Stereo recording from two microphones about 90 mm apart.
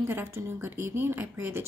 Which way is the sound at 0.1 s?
25° right (ahead or behind).